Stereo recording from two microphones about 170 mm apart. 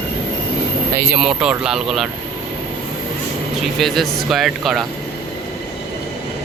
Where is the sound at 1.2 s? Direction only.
5° right (ahead or behind).